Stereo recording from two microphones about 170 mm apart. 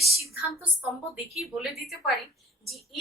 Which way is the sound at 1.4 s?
Centre (ahead or behind).